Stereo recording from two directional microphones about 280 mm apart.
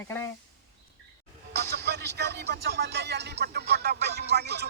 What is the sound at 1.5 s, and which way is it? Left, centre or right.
Music, right.